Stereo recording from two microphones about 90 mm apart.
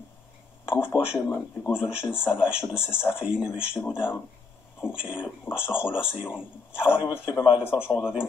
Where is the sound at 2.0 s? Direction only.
25° left (ahead or behind).